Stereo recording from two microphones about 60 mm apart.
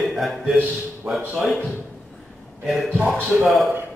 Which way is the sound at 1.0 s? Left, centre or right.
Right.